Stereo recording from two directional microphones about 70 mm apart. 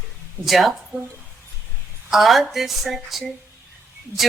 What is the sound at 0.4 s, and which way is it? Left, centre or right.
Music, centre.